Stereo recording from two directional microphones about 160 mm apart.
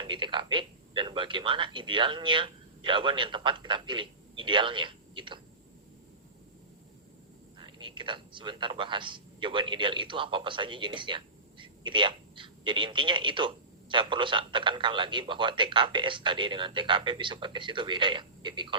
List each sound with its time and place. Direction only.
0.0 s a man's voice: 30° right (ahead or behind)
7.6 s a man's voice: 30° right (ahead or behind)